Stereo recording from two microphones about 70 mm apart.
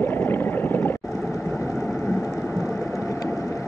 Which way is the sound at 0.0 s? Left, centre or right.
Left.